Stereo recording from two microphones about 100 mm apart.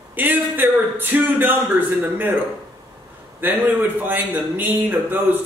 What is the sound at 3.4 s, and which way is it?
A man's voice, 20° right (ahead or behind).